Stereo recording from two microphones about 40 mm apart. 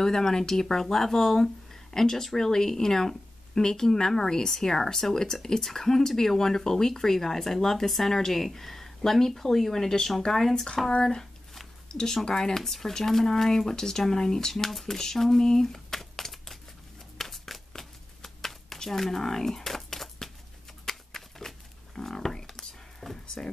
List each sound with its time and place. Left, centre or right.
0.0 s speech: centre
10.9 s speech: left; by 16.5 s centre
17.2 s shuffling cards: centre
20.8 s a sound: centre
23.4 s speech: centre